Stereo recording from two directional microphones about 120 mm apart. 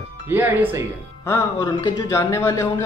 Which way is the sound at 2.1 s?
20° left (ahead or behind).